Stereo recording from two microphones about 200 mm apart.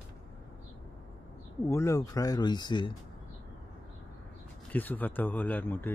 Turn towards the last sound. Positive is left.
turn(degrees=10)  # may be behind; listen again after turning